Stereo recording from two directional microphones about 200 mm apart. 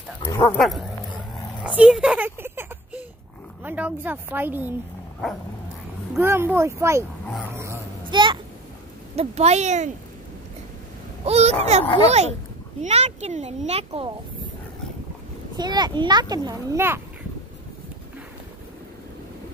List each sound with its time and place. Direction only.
0.2 s speech: 10° left (ahead or behind)
0.6 s bow-wow: centre (ahead or behind)
1.6 s a sound: 5° right (ahead or behind)
3.6 s a woman's voice: 10° right (ahead or behind)
6.1 s a woman's voice: 10° right (ahead or behind)
7.5 s a sound: 15° right (ahead or behind)
9.1 s speech: 30° right (ahead or behind)
11.2 s a child's voice: 30° right (ahead or behind)
15.5 s a child's voice: 20° right (ahead or behind)